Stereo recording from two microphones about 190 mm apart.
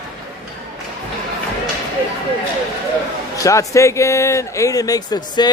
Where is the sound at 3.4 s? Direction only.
15° left (ahead or behind).